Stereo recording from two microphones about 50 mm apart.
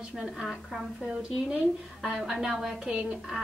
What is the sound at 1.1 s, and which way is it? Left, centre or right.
Speech, right.